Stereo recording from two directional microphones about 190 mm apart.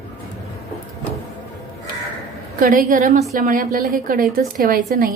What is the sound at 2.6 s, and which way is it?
A woman's voice, 50° right (ahead or behind).